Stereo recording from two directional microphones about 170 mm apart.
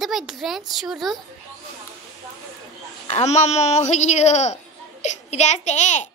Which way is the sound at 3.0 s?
40° left (ahead or behind).